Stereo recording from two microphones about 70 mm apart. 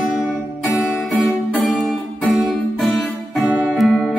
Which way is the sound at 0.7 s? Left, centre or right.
Left.